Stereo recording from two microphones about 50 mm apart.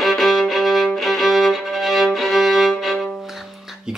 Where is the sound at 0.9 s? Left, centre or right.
Centre.